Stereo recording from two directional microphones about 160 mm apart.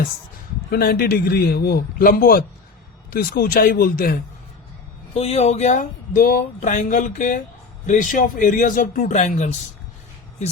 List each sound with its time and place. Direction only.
0.7 s a man's voice: 80° left; by 4.2 s 65° left (ahead or behind)
5.1 s speech: 40° left (ahead or behind); by 6.7 s 65° left (ahead or behind)
6.7 s speech: 50° left (ahead or behind)